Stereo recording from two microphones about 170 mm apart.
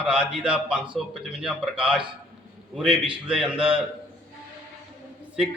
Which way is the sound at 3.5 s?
30° right (ahead or behind).